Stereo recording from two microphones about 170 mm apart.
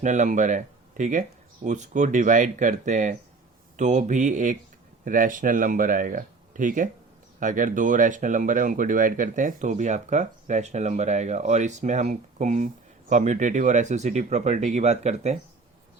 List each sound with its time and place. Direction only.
0.0 s speech: 45° right (ahead or behind)